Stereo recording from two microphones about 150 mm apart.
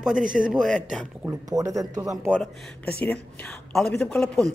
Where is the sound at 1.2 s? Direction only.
20° right (ahead or behind).